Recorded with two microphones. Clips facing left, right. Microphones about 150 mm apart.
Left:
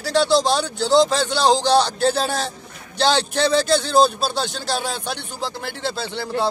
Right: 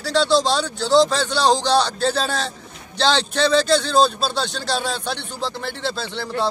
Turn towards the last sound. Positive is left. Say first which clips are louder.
# left 1 dB
turn(degrees=15)  # may be behind; listen again after turning